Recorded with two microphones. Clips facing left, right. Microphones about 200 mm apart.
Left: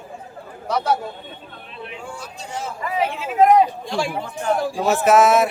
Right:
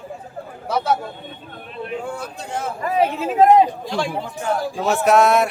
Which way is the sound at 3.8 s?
Centre (ahead or behind).